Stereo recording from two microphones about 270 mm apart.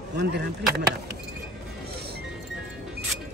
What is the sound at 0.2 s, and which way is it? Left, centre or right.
Speech, right.